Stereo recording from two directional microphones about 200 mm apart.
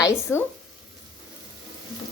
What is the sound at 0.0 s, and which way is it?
Speech, 15° left (ahead or behind).